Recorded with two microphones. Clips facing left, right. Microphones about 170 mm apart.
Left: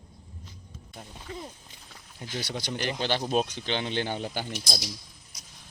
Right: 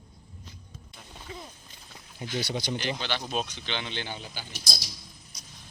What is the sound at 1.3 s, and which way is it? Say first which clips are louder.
Clip-clop: left 3 dB; 5° right (ahead or behind).